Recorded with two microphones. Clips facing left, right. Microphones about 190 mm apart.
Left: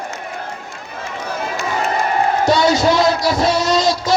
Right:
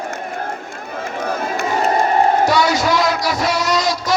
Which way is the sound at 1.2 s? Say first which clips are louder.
Right 2 dB; 55° right (ahead or behind).